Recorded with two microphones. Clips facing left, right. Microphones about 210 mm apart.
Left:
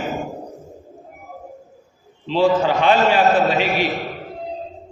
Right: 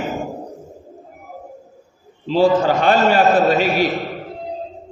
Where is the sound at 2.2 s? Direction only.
40° right (ahead or behind).